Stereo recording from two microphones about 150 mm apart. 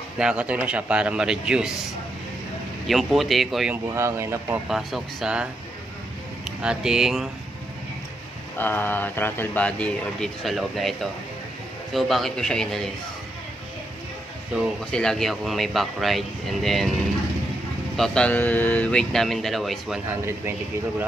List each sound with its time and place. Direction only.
0.2 s a man's voice: 5° right (ahead or behind)
2.9 s speech: centre (ahead or behind)
3.7 s speech: 20° right (ahead or behind)
4.6 s speech: 5° right (ahead or behind)
6.6 s speech: 5° right (ahead or behind)
8.5 s speech: 15° left (ahead or behind)
14.5 s speech: 5° left (ahead or behind)
17.9 s speech: 5° left (ahead or behind)
20.1 s a man's voice: 15° right (ahead or behind)